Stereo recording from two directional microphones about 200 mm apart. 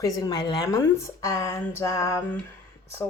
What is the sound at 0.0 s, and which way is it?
Speech, 20° left (ahead or behind).